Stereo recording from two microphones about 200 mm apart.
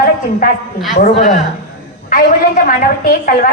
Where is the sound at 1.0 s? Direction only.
35° left (ahead or behind).